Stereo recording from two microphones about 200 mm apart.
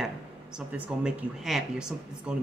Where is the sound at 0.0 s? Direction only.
5° right (ahead or behind).